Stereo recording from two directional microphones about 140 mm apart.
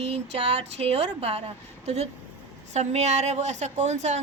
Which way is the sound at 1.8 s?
50° right (ahead or behind).